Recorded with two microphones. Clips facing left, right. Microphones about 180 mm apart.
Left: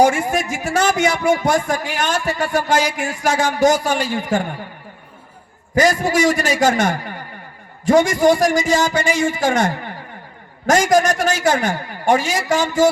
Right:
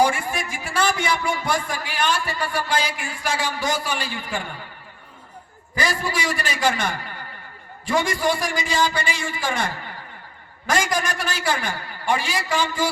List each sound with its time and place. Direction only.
0.0 s a man's voice: 45° left (ahead or behind)
5.7 s a man's voice: 45° left (ahead or behind)